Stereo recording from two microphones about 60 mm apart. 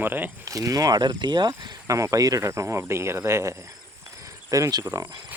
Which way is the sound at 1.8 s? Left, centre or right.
Right.